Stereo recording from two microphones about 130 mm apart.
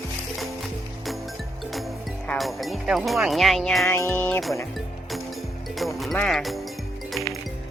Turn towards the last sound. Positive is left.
turn(degrees=0)  # may be behind; listen again after turning